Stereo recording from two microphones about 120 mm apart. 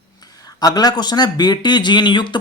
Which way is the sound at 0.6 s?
35° left (ahead or behind).